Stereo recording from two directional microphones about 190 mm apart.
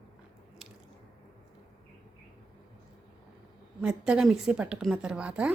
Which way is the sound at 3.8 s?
5° right (ahead or behind).